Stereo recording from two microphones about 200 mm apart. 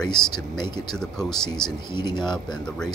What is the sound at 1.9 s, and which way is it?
Speech, 20° left (ahead or behind).